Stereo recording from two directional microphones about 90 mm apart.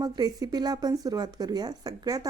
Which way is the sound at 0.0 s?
45° right (ahead or behind).